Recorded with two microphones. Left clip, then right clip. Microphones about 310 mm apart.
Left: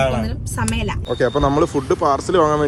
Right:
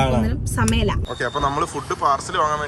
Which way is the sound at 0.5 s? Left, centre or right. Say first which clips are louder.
Right 2 dB; left.